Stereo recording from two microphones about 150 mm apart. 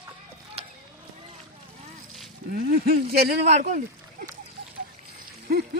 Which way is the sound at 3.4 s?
50° right (ahead or behind).